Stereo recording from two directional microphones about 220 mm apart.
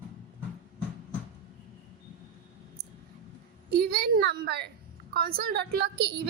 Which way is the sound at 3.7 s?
45° right (ahead or behind).